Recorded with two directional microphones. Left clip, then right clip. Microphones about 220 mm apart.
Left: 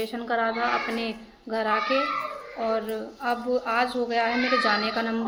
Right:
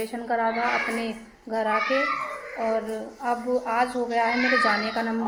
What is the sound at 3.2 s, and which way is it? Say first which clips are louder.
A woman's voice: right 1 dB; centre (ahead or behind).